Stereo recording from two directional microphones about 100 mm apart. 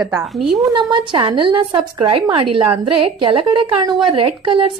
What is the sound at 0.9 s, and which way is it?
A woman's voice, 50° right (ahead or behind).